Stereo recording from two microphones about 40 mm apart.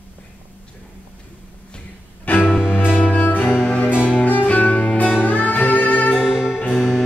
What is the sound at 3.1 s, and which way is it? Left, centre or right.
Music, left.